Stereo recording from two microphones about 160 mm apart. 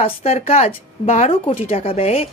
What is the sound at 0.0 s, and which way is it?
Speech, 40° left (ahead or behind).